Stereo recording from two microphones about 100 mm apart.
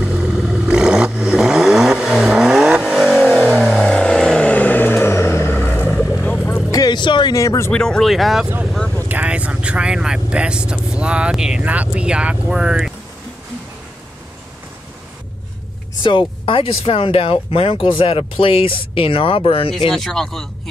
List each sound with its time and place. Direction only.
0.0 s vehicle: 10° right (ahead or behind); by 5.9 s 20° left (ahead or behind)
6.7 s music: 45° left (ahead or behind)
7.3 s speech: 30° left (ahead or behind)
7.7 s speech: 10° left (ahead or behind)
9.1 s speech: 15° right (ahead or behind)
16.0 s speech: 55° left (ahead or behind)
19.9 s speech: 5° left (ahead or behind)